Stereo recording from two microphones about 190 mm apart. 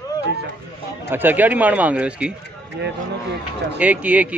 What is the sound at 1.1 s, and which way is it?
Speech, 10° right (ahead or behind).